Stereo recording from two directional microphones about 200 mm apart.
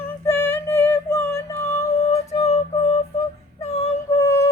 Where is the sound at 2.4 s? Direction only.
30° left (ahead or behind).